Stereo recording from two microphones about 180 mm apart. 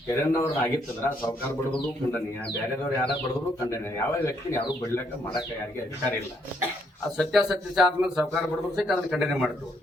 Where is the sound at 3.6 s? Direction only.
15° left (ahead or behind).